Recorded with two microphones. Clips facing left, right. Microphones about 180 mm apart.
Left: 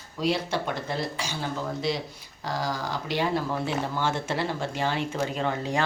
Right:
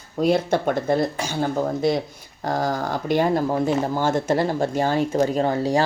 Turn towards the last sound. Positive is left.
turn(degrees=-35)  # may be behind; listen again after turning